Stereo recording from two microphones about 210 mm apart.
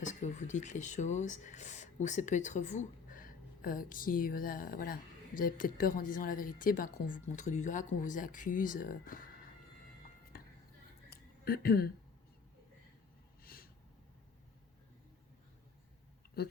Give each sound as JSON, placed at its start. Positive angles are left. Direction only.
{"t": 0.0, "sound": "speech", "side_deg": 35}
{"t": 11.4, "sound": "speech", "side_deg": 45}
{"t": 13.4, "sound": "a sound", "side_deg": 45}